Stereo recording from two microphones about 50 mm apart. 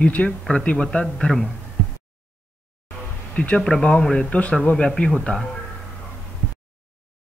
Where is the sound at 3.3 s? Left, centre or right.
Left.